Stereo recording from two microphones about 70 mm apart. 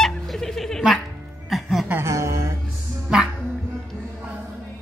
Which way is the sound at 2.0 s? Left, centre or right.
Right.